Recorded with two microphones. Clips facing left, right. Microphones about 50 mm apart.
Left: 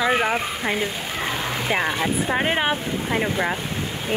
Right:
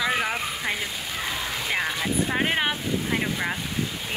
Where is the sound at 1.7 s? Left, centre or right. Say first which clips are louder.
Left 4 dB; left.